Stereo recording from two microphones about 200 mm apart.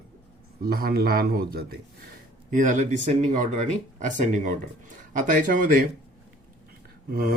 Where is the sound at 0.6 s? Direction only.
50° right (ahead or behind).